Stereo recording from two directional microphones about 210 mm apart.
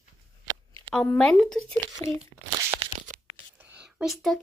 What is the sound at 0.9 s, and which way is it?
Speech, 5° left (ahead or behind).